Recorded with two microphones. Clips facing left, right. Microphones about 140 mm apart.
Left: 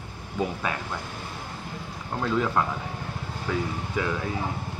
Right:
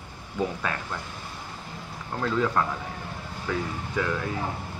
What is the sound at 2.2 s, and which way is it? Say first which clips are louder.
Speech: even; 10° left (ahead or behind).